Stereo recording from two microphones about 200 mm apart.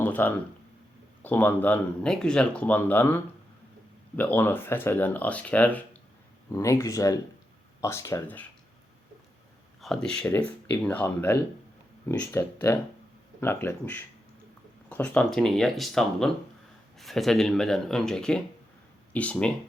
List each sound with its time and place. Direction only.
0.0 s speech: 10° left (ahead or behind)
4.2 s speech: 10° left (ahead or behind)
9.8 s speech: centre (ahead or behind)